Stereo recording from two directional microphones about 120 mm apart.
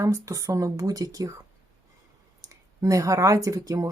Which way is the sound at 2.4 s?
30° right (ahead or behind).